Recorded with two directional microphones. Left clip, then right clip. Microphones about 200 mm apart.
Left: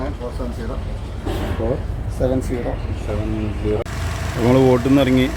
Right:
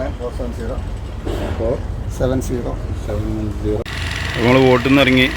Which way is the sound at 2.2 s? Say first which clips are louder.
Right 1 dB; 50° right (ahead or behind).